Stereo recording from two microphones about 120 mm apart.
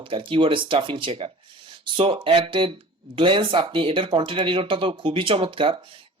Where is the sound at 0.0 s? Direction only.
45° right (ahead or behind).